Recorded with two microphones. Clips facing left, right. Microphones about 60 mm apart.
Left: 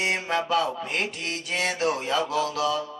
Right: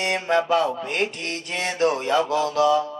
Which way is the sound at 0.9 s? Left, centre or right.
Right.